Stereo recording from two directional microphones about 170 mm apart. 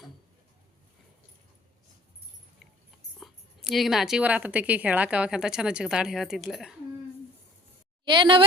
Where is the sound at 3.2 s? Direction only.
Centre (ahead or behind).